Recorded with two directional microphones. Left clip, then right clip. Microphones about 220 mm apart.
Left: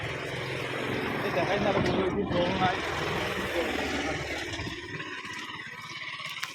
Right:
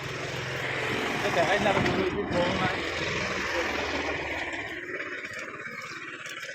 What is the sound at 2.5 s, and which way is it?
Vehicle, 20° left (ahead or behind).